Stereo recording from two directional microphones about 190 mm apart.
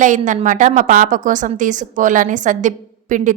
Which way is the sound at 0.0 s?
40° right (ahead or behind).